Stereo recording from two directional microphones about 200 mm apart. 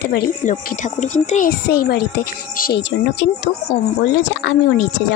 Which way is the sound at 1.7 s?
50° left (ahead or behind).